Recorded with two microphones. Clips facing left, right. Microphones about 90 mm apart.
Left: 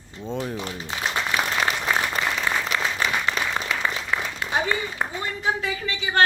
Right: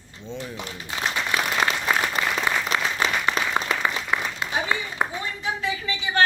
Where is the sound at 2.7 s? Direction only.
25° right (ahead or behind).